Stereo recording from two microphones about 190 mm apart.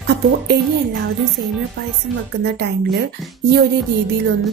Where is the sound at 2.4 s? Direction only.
60° right (ahead or behind).